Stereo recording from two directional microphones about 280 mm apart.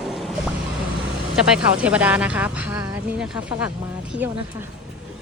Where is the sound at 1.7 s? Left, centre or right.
Centre.